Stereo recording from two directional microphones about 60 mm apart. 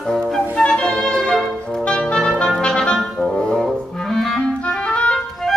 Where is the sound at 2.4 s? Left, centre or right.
Centre.